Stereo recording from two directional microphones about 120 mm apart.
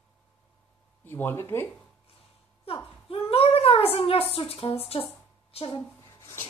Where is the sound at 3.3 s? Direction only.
55° left (ahead or behind).